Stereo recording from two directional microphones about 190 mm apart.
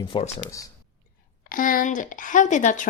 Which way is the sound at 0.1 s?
30° left (ahead or behind).